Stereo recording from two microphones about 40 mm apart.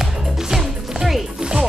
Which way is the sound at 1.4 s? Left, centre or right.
Centre.